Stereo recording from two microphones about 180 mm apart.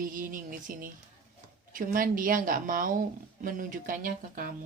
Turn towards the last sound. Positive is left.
turn(degrees=-50)  # may be behind; listen again after turning